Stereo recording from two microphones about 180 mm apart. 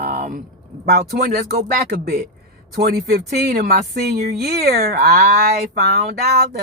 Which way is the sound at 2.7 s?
60° right (ahead or behind).